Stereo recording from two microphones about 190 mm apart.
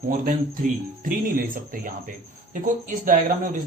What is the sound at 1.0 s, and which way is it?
Speech, 50° right (ahead or behind).